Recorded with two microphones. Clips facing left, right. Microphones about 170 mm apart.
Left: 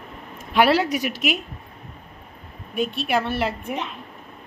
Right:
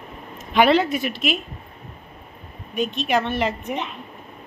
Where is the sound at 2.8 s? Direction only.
5° left (ahead or behind).